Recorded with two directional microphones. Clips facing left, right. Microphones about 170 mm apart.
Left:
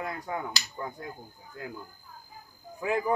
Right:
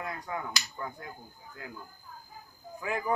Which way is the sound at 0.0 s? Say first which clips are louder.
Left 3 dB; 30° left (ahead or behind).